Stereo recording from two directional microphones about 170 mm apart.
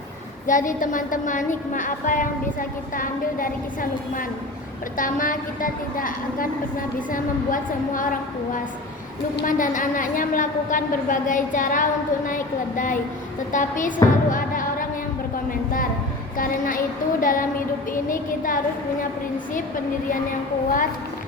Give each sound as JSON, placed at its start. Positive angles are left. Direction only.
{"t": 0.4, "sound": "a woman's voice", "side_deg": 50}
{"t": 16.4, "sound": "a sound", "side_deg": 55}
{"t": 18.1, "sound": "a woman's voice", "side_deg": 55}